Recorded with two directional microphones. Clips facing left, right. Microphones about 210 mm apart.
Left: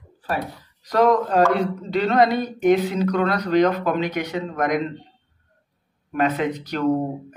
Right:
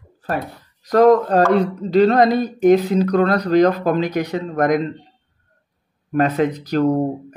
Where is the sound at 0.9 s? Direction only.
40° right (ahead or behind).